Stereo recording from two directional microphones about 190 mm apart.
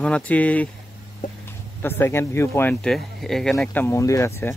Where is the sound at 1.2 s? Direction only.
45° left (ahead or behind).